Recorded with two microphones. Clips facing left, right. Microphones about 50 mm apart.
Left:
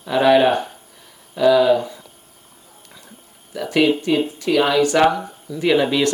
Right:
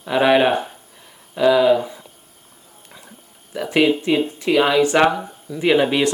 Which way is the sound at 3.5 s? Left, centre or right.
Right.